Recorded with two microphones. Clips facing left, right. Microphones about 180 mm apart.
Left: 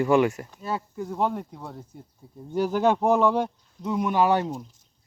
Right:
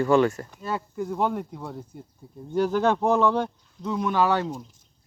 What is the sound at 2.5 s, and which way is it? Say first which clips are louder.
Speech: even; 10° left (ahead or behind).